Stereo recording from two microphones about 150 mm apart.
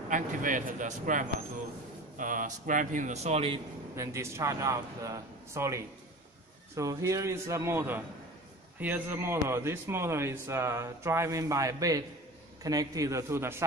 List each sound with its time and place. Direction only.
0.1 s a man's voice: 60° right (ahead or behind); by 3.6 s 40° right (ahead or behind)
3.9 s a man's voice: 20° right (ahead or behind)